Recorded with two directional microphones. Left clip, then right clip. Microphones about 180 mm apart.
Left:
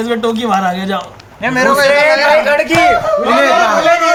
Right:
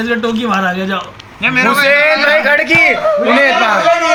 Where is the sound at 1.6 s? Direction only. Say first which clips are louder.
Left 2 dB; 5° right (ahead or behind).